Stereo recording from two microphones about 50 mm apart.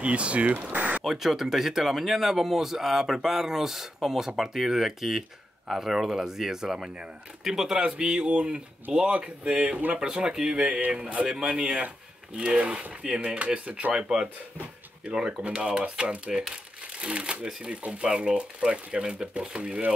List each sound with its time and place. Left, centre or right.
0.0 s speech: right
0.7 s a sound: right
1.0 s speech: centre
7.8 s speech: right
9.9 s speech: centre
13.9 s speech: centre